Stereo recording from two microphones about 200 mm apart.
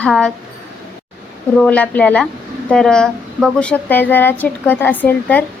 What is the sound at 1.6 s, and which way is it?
A woman's voice, 5° left (ahead or behind).